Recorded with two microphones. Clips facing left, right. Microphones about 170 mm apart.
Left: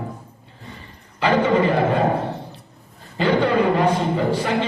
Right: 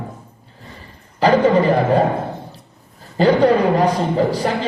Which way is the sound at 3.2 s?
40° right (ahead or behind).